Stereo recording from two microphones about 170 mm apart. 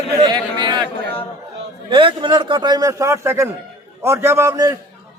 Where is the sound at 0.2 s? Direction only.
25° right (ahead or behind).